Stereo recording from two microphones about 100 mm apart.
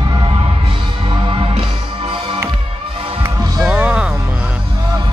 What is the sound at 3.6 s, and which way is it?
Music, 10° right (ahead or behind).